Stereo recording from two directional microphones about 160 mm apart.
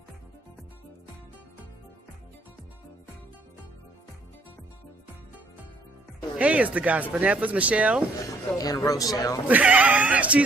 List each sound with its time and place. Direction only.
6.3 s speech: 10° right (ahead or behind)
8.4 s a man's voice: 20° left (ahead or behind)
9.5 s speech: 10° right (ahead or behind)